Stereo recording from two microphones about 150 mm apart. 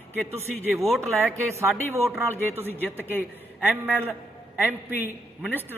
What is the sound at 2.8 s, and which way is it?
Speech, 15° left (ahead or behind).